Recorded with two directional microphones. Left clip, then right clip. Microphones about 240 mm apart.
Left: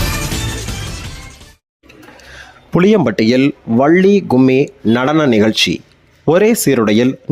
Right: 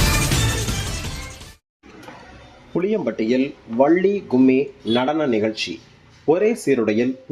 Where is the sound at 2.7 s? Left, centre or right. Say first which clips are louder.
Left 10 dB; left.